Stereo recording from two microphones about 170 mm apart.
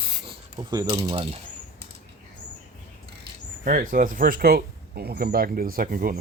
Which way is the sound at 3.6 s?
50° right (ahead or behind).